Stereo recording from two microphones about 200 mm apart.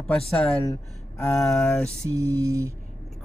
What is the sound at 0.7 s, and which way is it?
Speech, 15° left (ahead or behind).